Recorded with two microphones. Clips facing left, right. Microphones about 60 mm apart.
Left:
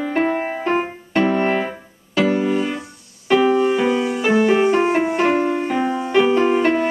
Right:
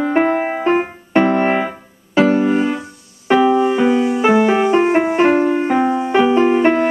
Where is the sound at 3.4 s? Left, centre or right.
Centre.